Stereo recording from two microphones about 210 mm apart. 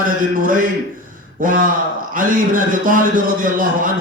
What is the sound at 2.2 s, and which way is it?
Speech, 40° right (ahead or behind).